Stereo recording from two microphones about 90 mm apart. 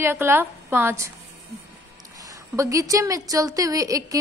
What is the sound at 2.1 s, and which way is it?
A woman's voice, 40° right (ahead or behind).